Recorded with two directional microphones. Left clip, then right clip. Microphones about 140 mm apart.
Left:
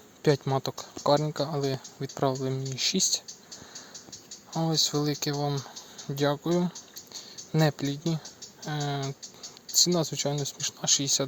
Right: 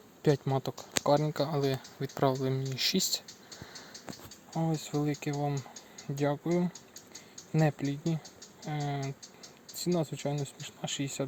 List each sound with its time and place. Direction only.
0.2 s speech: 5° left (ahead or behind)
4.5 s speech: 15° left (ahead or behind)